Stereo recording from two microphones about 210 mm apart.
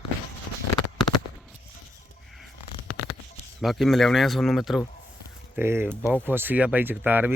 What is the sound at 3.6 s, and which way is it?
A man's voice, centre (ahead or behind).